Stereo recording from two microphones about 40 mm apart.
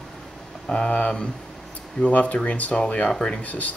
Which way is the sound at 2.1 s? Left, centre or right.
Left.